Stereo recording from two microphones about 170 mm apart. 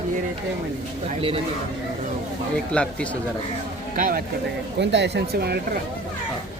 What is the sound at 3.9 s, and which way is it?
Speech, 50° right (ahead or behind).